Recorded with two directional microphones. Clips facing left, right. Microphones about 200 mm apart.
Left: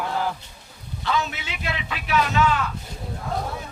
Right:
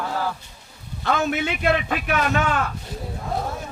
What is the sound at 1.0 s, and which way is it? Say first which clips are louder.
Speech: right 4 dB; 55° right (ahead or behind).